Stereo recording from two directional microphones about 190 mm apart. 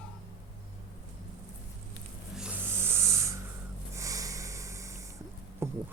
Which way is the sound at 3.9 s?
15° right (ahead or behind).